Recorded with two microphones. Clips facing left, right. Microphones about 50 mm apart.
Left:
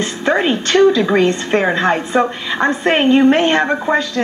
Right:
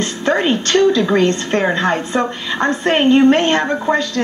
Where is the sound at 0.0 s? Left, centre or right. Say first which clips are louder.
Left 1 dB; centre.